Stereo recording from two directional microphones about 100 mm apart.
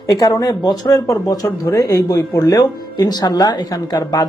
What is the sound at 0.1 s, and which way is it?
Speech, 40° left (ahead or behind).